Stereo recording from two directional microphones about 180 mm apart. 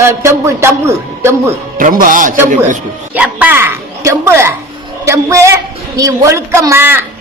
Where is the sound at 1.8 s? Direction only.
50° right (ahead or behind).